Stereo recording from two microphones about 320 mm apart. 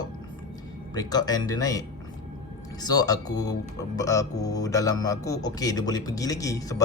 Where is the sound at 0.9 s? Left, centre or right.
Centre.